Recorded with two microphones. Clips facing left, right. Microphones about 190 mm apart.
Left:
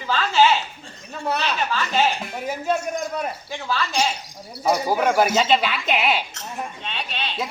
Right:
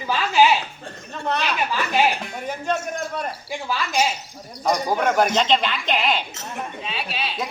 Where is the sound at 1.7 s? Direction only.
15° right (ahead or behind).